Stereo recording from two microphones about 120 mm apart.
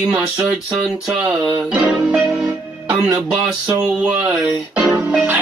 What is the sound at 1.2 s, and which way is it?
Speech, 10° right (ahead or behind).